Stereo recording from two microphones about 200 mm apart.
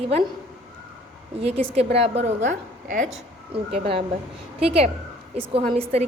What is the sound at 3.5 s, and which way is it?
A woman's voice, 25° right (ahead or behind).